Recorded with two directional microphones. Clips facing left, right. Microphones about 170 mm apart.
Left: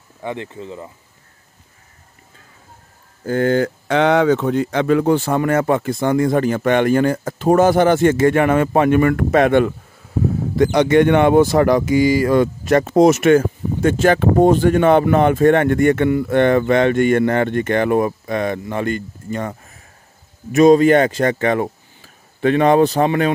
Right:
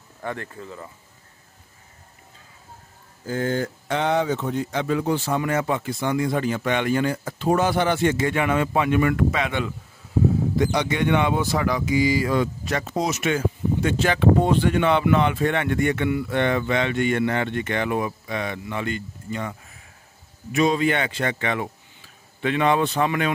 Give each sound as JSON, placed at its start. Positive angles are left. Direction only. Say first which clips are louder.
{"t": 0.2, "sound": "speech", "louder": "left 5 dB", "side_deg": 20}
{"t": 3.3, "sound": "speech", "louder": "left 8 dB", "side_deg": 70}